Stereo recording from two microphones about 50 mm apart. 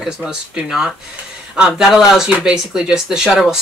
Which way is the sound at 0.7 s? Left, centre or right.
Centre.